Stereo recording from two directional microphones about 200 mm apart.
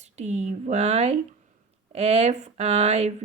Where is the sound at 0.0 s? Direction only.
35° right (ahead or behind).